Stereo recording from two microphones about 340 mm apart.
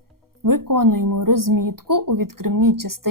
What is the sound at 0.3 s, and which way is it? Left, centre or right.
Speech, right.